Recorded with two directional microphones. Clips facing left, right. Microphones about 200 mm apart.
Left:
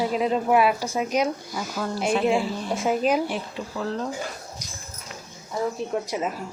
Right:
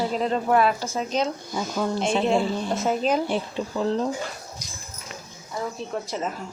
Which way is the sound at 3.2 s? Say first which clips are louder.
Right 3 dB; 30° right (ahead or behind).